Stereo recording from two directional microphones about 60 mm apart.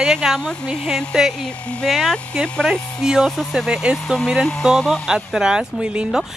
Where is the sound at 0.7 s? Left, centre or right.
Centre.